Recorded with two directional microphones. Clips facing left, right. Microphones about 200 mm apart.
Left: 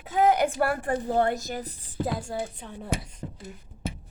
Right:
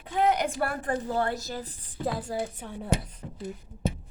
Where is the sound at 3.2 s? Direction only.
45° left (ahead or behind).